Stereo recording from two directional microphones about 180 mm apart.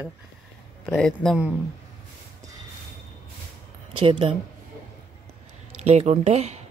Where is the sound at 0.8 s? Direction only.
5° left (ahead or behind).